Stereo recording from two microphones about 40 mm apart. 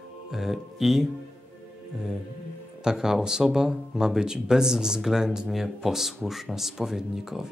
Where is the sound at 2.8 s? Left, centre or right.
Centre.